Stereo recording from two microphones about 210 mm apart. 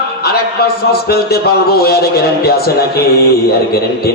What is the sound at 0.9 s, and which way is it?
A man's voice, 50° left (ahead or behind).